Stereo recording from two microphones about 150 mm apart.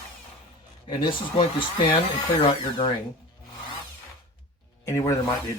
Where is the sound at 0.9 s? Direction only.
35° left (ahead or behind).